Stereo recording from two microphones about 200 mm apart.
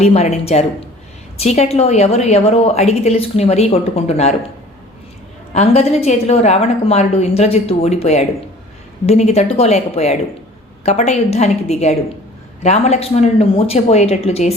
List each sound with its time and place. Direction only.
0.0 s a woman's voice: 30° left (ahead or behind)
5.5 s a woman's voice: 30° left (ahead or behind)